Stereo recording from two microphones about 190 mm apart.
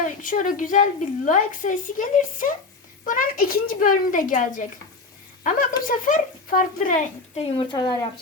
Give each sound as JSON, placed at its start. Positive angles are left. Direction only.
{"t": 0.0, "sound": "a woman's voice", "side_deg": 45}
{"t": 7.3, "sound": "speech", "side_deg": 30}